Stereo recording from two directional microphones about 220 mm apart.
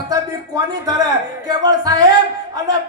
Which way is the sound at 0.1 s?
15° right (ahead or behind).